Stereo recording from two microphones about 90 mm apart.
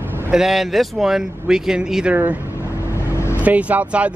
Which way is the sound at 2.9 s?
30° left (ahead or behind).